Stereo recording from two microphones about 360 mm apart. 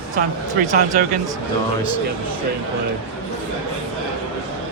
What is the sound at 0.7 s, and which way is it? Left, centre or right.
Speech, right.